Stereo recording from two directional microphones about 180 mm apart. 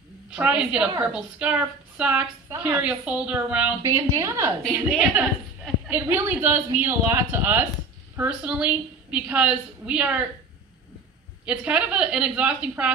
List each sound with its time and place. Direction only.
0.3 s a woman's voice: 5° right (ahead or behind)
3.8 s a woman's voice: 20° right (ahead or behind)
4.6 s a woman's voice: 5° right (ahead or behind)
11.4 s a woman's voice: 5° right (ahead or behind)